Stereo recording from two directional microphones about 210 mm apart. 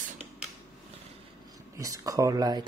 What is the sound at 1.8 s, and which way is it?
Speech, 15° right (ahead or behind).